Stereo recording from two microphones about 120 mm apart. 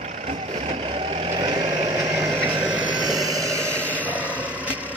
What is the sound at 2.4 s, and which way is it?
Vehicle, 40° right (ahead or behind).